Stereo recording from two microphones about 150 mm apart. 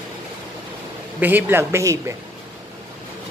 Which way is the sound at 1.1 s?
10° right (ahead or behind).